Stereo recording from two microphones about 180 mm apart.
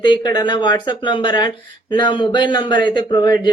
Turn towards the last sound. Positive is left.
turn(degrees=25)  # may be behind; listen again after turning